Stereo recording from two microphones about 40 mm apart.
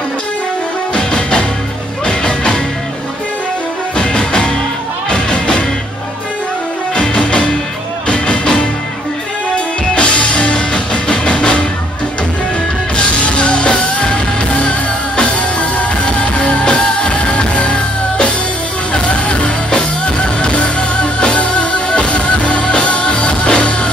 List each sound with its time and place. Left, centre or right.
0.9 s music: centre
3.9 s music: left
7.0 s music: left
9.9 s music: left
12.9 s music: left